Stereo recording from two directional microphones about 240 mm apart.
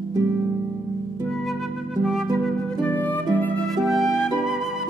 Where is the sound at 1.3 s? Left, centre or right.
Centre.